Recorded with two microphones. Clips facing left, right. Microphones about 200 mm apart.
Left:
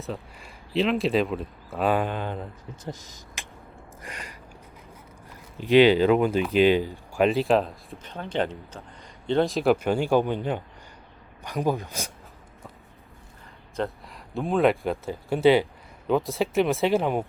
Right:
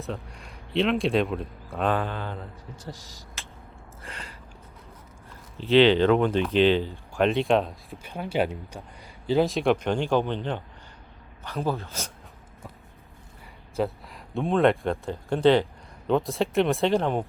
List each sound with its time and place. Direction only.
0.0 s speech: centre (ahead or behind); by 3.4 s 20° left (ahead or behind)
4.0 s a sound: 15° left (ahead or behind)
5.5 s speech: 10° left (ahead or behind)
7.9 s speech: 10° right (ahead or behind); by 12.1 s 15° left (ahead or behind)
13.7 s speech: centre (ahead or behind)